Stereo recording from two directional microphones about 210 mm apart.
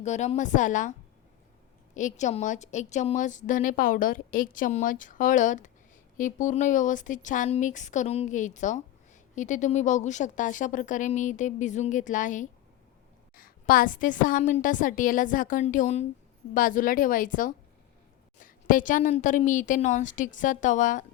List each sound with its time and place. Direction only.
0.0 s a woman's voice: 35° left (ahead or behind)
2.0 s a woman's voice: 35° left (ahead or behind)